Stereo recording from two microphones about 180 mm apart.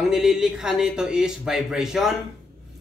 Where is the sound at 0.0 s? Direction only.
Centre (ahead or behind).